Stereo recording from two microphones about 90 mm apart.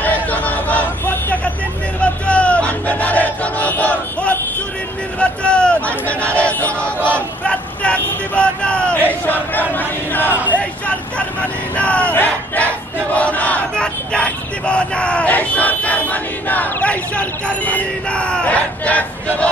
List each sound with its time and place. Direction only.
0.0 s hubbub: 20° left (ahead or behind)
2.0 s battle cry: 15° left (ahead or behind)
5.2 s speech: 10° left (ahead or behind)
10.5 s a sound: 15° left (ahead or behind)
11.7 s battle cry: 15° left (ahead or behind)
13.1 s speech: 15° left (ahead or behind)